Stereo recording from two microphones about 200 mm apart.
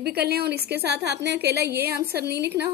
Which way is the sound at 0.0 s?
50° right (ahead or behind).